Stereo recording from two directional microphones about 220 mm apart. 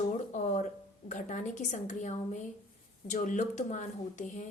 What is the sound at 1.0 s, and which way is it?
A woman's voice, 35° left (ahead or behind).